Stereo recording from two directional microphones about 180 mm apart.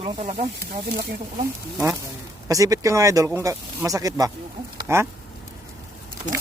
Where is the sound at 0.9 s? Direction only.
50° right (ahead or behind).